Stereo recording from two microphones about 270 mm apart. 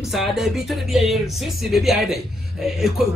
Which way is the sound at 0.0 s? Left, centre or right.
Centre.